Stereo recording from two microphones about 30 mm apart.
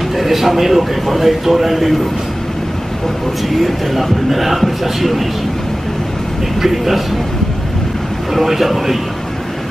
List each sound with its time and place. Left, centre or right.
0.1 s a man's voice: centre
3.4 s speech: centre
6.6 s speech: centre
8.3 s speech: centre